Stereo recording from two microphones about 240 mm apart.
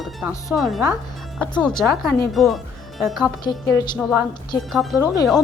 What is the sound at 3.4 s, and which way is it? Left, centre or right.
Speech, centre.